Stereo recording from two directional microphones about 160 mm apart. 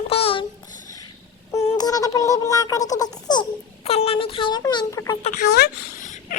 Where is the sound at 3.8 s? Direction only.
40° left (ahead or behind); by 5.2 s 20° left (ahead or behind).